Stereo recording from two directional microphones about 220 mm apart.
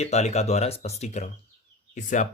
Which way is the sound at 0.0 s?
30° left (ahead or behind).